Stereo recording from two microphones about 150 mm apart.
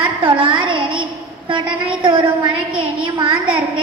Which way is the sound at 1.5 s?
35° right (ahead or behind).